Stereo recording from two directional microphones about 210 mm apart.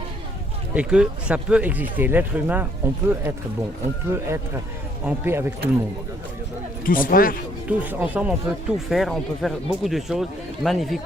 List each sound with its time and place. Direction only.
0.7 s speech: 5° right (ahead or behind)
6.8 s a man's voice: 40° left (ahead or behind)
7.7 s speech: 10° right (ahead or behind)